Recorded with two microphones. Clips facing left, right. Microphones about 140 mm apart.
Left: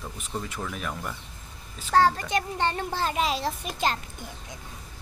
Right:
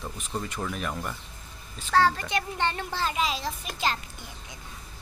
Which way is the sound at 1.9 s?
45° left (ahead or behind).